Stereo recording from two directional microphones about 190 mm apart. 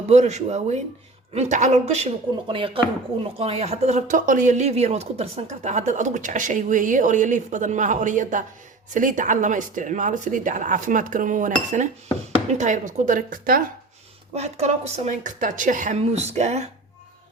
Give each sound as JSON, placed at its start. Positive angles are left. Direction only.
{"t": 0.1, "sound": "speech", "side_deg": -35}
{"t": 14.3, "sound": "speech", "side_deg": -35}